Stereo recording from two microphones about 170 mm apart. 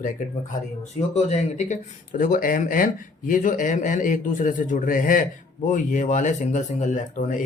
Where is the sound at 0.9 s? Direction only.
40° left (ahead or behind).